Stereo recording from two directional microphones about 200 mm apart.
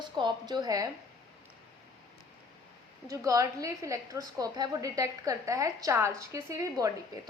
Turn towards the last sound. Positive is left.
turn(degrees=-15)  # may be behind; listen again after turning